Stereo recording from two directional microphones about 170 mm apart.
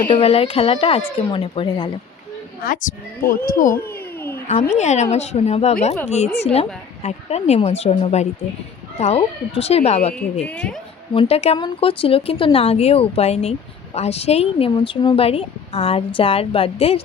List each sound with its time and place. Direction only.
0.1 s speech: 35° left (ahead or behind)
2.6 s speech: 55° left (ahead or behind)
3.8 s cat: 15° left (ahead or behind)
4.7 s speech: 40° left (ahead or behind)
10.4 s a woman's voice: 5° left (ahead or behind)
11.1 s speech: 35° left (ahead or behind)